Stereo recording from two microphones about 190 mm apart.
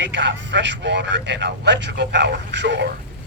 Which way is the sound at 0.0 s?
70° right (ahead or behind).